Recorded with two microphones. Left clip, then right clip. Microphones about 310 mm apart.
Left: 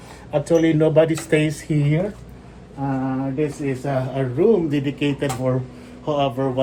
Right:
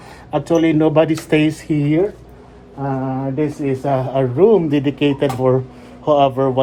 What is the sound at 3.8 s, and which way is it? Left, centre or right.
Speech, right.